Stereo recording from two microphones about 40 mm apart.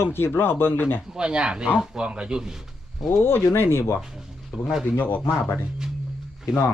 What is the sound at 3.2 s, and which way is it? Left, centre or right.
Speech, left.